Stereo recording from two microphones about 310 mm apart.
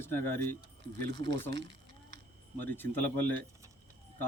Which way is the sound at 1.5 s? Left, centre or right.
Right.